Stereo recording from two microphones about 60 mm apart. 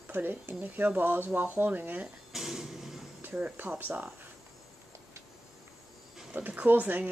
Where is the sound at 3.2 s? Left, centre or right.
Right.